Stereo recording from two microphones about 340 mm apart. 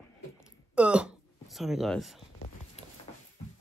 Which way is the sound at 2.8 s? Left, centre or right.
Centre.